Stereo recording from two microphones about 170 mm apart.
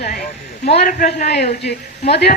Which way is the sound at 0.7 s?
60° left (ahead or behind).